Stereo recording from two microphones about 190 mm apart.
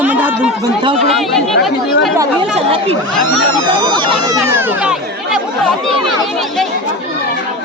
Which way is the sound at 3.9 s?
25° right (ahead or behind).